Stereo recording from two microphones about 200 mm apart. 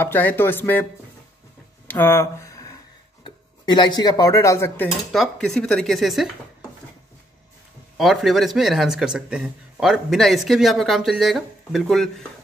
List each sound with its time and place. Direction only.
0.0 s speech: 10° left (ahead or behind)
1.9 s speech: 10° left (ahead or behind)
5.1 s a man's voice: centre (ahead or behind)
8.0 s a man's voice: centre (ahead or behind)